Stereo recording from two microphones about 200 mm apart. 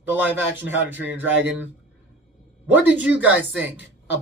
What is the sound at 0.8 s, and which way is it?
Speech, 70° right (ahead or behind).